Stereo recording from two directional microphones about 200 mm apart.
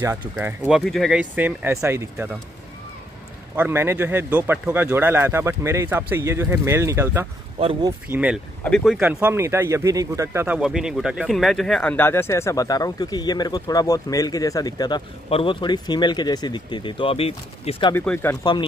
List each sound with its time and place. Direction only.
0.0 s speech: 10° right (ahead or behind)
3.5 s speech: 10° right (ahead or behind)
7.5 s speech: 25° right (ahead or behind)
8.1 s speech: 5° right (ahead or behind)
9.0 s speech: 10° right (ahead or behind); by 17.9 s 25° left (ahead or behind)
17.9 s speech: 10° left (ahead or behind)